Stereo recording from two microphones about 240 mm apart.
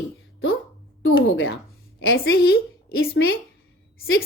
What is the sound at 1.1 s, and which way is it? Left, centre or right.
A woman's voice, left.